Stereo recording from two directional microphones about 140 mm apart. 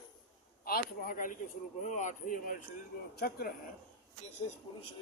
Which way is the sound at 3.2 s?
90° left.